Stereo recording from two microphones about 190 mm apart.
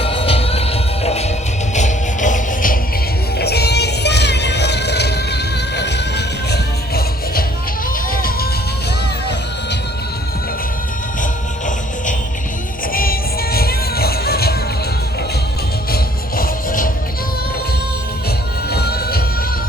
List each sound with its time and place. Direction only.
0.0 s music: 30° left (ahead or behind); by 2.7 s 45° left (ahead or behind)
3.3 s music: 60° left (ahead or behind)
12.9 s music: 50° left (ahead or behind)
16.4 s music: 45° left (ahead or behind)
18.7 s music: 55° left (ahead or behind)